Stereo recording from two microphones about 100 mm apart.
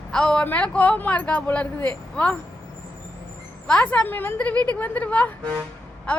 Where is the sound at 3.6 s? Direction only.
10° left (ahead or behind).